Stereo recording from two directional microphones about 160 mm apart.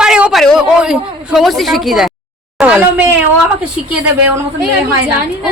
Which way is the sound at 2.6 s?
5° right (ahead or behind).